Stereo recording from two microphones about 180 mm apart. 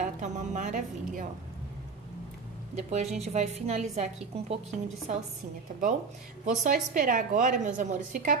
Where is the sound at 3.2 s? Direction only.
35° right (ahead or behind).